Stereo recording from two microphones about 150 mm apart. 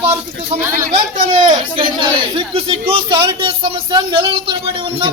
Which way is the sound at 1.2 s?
30° right (ahead or behind).